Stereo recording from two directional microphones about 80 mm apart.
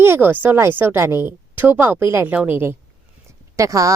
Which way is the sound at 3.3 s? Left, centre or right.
Right.